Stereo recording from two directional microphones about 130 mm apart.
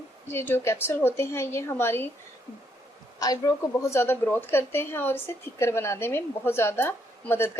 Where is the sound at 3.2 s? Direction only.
30° left (ahead or behind).